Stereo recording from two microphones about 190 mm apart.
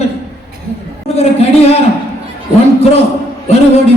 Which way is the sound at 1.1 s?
30° left (ahead or behind).